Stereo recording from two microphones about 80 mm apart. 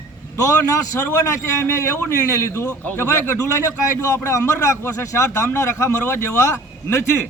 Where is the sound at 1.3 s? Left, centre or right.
Left.